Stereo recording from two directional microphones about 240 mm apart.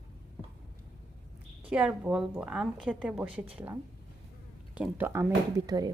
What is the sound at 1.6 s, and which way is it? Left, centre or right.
A woman's voice, centre.